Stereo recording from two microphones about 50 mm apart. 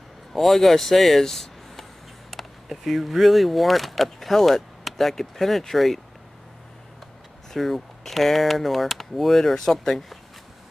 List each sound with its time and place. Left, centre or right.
0.3 s speech: centre
7.5 s speech: centre